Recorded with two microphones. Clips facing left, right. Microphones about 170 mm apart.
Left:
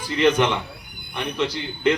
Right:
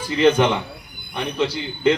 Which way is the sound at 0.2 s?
30° right (ahead or behind).